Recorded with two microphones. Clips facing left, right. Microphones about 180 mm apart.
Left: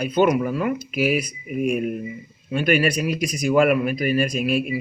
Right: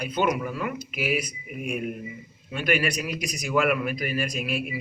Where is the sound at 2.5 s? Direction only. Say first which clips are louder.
Left 6 dB; 30° left (ahead or behind).